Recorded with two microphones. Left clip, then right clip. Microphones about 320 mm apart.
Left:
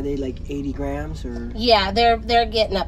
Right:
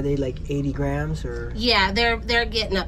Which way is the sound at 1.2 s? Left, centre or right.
Left.